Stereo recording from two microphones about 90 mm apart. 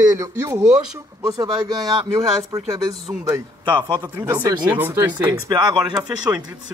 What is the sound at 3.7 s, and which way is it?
Speech, 55° right (ahead or behind).